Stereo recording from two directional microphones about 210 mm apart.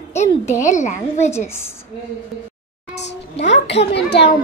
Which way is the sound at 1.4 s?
10° left (ahead or behind).